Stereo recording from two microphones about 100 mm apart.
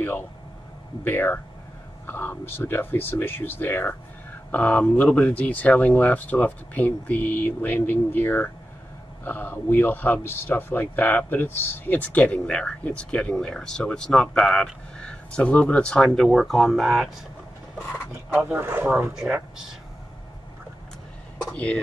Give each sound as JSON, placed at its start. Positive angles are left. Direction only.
{"t": 1.0, "sound": "speech", "side_deg": 20}
{"t": 18.3, "sound": "speech", "side_deg": -20}
{"t": 19.1, "sound": "speech", "side_deg": -10}
{"t": 21.5, "sound": "speech", "side_deg": 10}